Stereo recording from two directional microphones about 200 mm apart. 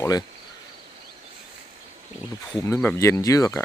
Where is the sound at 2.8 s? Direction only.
10° left (ahead or behind).